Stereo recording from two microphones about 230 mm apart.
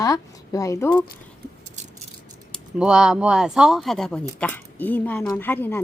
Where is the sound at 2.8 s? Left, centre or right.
Centre.